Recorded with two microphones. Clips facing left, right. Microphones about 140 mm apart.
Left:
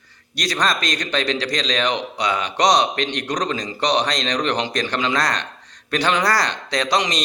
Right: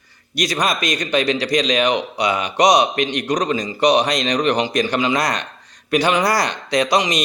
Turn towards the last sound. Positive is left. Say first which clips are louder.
# right 3 dB
turn(degrees=-10)  # may be behind; listen again after turning